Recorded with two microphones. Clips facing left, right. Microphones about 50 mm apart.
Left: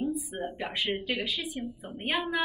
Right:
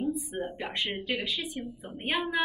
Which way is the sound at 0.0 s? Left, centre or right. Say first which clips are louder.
Even; centre.